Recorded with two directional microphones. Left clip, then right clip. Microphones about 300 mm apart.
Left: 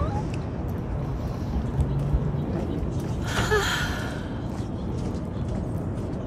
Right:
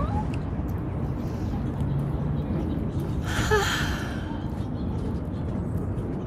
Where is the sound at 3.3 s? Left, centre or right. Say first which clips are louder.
Even; centre.